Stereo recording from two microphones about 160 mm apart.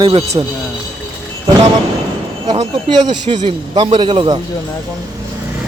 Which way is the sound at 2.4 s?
25° right (ahead or behind).